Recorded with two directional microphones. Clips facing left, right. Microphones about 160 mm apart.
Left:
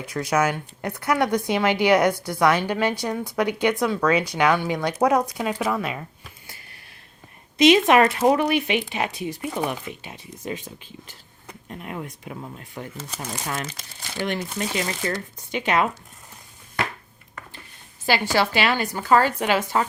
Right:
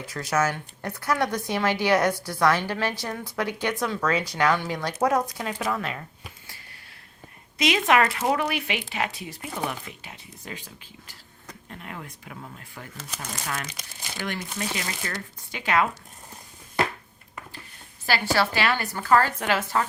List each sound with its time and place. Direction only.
0.1 s speech: 15° left (ahead or behind)
7.6 s speech: 25° left (ahead or behind)
15.0 s speech: 25° left (ahead or behind)
18.0 s speech: 20° left (ahead or behind)